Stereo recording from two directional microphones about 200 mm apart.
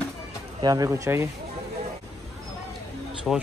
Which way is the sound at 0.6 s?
20° right (ahead or behind).